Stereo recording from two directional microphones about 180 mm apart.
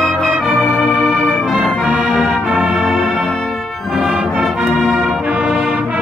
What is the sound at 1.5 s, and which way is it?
Music, centre (ahead or behind).